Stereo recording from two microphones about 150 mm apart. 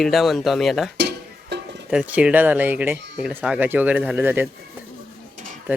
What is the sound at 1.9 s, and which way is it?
Speech, 10° right (ahead or behind).